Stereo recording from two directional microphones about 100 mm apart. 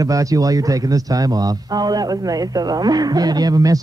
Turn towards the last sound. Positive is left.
turn(degrees=-35)  # may be behind; listen again after turning